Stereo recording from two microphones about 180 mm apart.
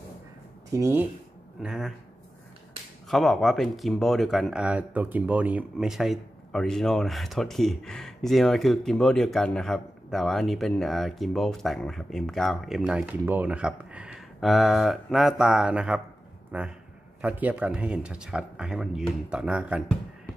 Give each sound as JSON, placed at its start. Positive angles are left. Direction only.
{"t": 0.7, "sound": "speech", "side_deg": -15}
{"t": 1.6, "sound": "speech", "side_deg": 0}
{"t": 3.1, "sound": "speech", "side_deg": 0}